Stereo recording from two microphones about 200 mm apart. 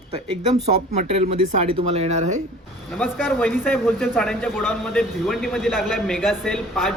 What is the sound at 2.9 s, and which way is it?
A man's voice, 5° left (ahead or behind).